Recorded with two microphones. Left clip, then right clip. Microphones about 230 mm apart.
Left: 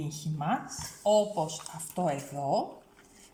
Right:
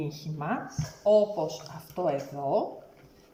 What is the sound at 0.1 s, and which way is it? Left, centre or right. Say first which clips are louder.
Speech: left 1 dB; left.